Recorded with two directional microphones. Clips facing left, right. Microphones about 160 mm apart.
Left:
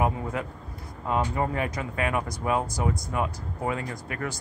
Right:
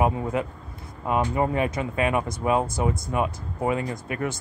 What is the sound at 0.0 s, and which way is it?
Speech, 20° right (ahead or behind).